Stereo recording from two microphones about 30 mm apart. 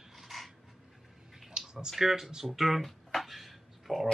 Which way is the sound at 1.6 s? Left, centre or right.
Right.